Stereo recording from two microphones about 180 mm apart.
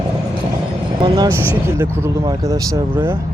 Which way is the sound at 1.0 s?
25° right (ahead or behind).